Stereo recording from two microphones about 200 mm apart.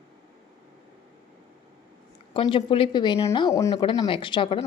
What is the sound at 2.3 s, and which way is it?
Speech, 25° left (ahead or behind).